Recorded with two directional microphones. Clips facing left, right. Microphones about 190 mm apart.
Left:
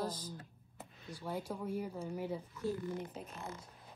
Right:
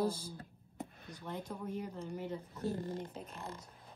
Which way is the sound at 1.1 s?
10° left (ahead or behind).